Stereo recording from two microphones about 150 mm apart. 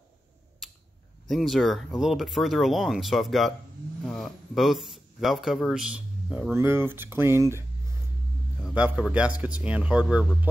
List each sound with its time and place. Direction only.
1.3 s a man's voice: centre (ahead or behind)
6.5 s speech: 15° right (ahead or behind)
8.6 s speech: 10° right (ahead or behind)